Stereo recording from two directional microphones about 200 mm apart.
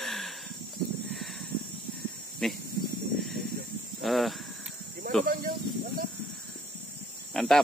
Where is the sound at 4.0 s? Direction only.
Centre (ahead or behind).